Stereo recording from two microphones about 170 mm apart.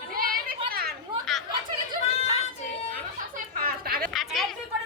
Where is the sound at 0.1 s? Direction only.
60° right (ahead or behind).